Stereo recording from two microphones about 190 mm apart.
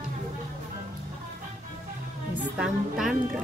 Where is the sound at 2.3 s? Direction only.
5° right (ahead or behind).